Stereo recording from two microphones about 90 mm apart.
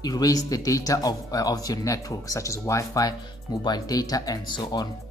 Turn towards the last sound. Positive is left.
turn(degrees=55)  # may be behind; listen again after turning